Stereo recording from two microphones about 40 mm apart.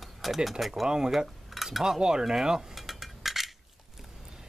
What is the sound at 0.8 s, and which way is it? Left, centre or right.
Speech, centre.